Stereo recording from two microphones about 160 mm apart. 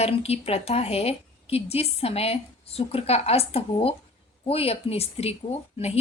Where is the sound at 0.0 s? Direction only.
40° left (ahead or behind).